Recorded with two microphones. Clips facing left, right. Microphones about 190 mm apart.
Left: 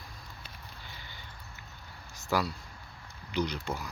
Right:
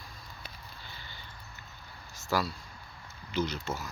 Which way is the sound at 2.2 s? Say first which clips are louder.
Left 1 dB; 15° left (ahead or behind).